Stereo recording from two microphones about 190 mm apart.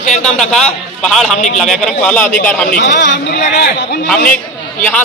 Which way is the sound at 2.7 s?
60° left (ahead or behind).